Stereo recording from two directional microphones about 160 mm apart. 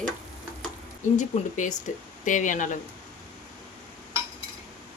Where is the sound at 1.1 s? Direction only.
50° left (ahead or behind).